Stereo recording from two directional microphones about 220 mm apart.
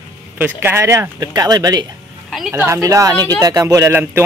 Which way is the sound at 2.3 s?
5° right (ahead or behind).